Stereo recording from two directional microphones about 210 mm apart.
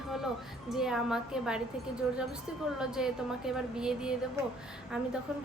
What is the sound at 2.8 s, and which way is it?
A woman's voice, 5° right (ahead or behind).